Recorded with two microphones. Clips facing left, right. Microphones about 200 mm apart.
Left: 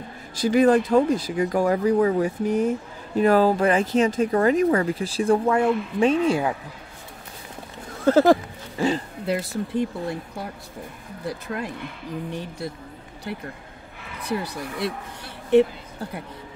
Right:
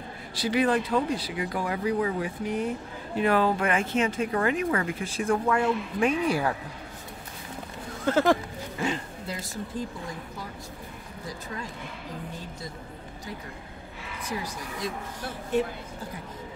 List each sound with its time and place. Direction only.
0.4 s speech: 45° left (ahead or behind); by 6.5 s 25° left (ahead or behind)
8.0 s a sound: 40° left (ahead or behind)
9.2 s speech: 65° left (ahead or behind)
14.2 s speech: 65° left (ahead or behind)